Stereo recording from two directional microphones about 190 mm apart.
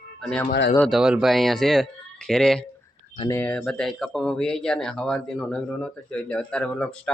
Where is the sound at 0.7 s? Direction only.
Centre (ahead or behind).